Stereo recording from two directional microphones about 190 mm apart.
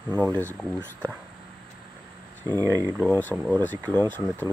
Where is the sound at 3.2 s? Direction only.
10° left (ahead or behind).